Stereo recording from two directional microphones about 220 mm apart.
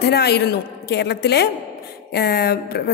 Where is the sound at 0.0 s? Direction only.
45° left (ahead or behind).